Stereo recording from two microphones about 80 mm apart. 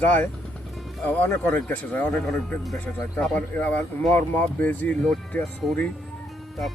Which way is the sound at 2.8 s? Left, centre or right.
Left.